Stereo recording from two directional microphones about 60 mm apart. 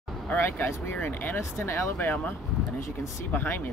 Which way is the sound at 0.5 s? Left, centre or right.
Left.